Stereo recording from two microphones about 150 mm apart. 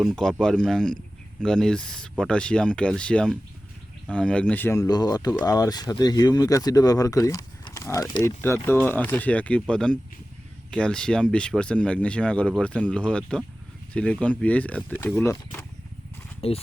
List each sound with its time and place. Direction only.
0.0 s speech: 5° left (ahead or behind)
16.4 s speech: 40° left (ahead or behind)